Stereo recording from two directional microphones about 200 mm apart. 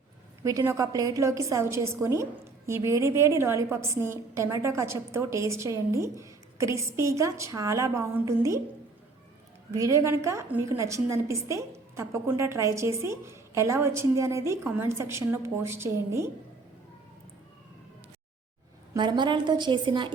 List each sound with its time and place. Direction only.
0.4 s a woman's voice: 15° right (ahead or behind)
9.7 s a woman's voice: 15° right (ahead or behind)
18.9 s a woman's voice: 20° right (ahead or behind)